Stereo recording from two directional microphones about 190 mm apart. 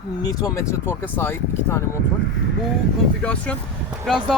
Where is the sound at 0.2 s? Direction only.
20° left (ahead or behind).